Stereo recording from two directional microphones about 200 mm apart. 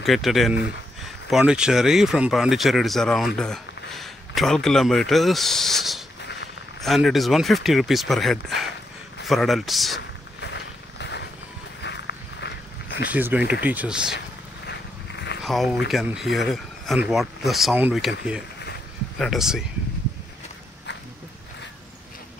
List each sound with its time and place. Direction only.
0.0 s speech: centre (ahead or behind)
10.4 s a sound: 60° left (ahead or behind)
11.8 s walk: 60° left (ahead or behind)
13.1 s speech: 10° right (ahead or behind)
14.7 s a sound: 55° left (ahead or behind)
15.4 s speech: centre (ahead or behind)
19.1 s speech: centre (ahead or behind)